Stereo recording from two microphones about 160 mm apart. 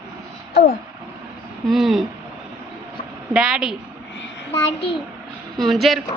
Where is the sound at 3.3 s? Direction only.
5° right (ahead or behind).